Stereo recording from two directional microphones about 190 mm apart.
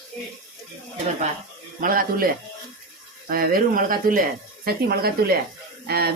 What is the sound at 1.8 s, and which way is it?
Speech, 50° right (ahead or behind).